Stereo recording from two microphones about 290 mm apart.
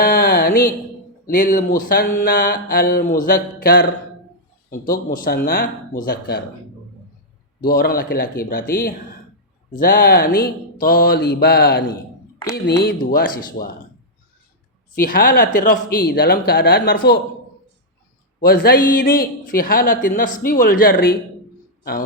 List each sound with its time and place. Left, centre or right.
0.0 s a sound: left
1.3 s a man's voice: left
7.7 s speech: left
14.9 s speech: left
18.3 s a man's voice: left